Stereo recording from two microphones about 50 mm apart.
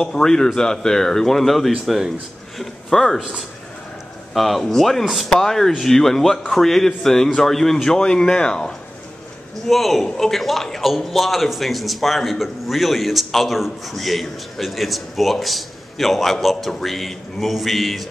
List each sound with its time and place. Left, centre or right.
0.0 s a man's voice: centre
2.6 s speech: centre
3.2 s a man's voice: centre
5.3 s a man's voice: centre
9.7 s a man's voice: centre